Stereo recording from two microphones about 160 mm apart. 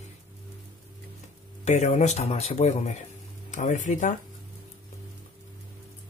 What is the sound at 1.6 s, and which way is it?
Speech, 45° left (ahead or behind).